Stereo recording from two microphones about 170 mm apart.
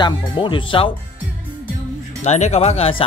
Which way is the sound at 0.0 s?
30° left (ahead or behind).